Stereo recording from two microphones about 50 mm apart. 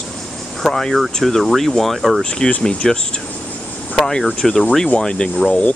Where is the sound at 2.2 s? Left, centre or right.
Centre.